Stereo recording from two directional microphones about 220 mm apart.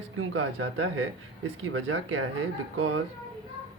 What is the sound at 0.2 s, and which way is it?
Speech, 65° right (ahead or behind).